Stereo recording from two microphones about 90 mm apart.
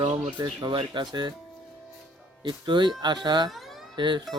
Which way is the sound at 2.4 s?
55° right (ahead or behind).